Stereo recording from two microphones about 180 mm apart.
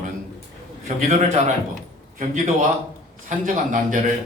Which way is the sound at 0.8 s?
40° right (ahead or behind).